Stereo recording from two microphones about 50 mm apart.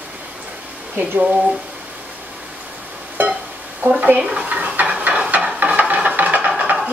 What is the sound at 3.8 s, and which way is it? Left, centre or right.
Stir, right.